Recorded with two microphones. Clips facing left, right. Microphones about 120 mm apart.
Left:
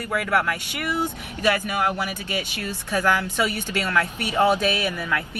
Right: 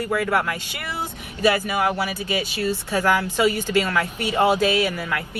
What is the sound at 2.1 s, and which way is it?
A woman's voice, 15° right (ahead or behind).